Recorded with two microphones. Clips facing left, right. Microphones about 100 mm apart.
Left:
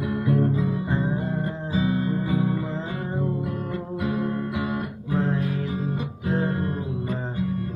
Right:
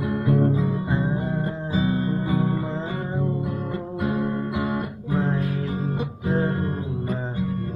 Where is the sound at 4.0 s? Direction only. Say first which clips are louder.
Right 2 dB; 40° right (ahead or behind).